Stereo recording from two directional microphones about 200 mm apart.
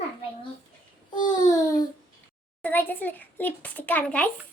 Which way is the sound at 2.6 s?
10° left (ahead or behind).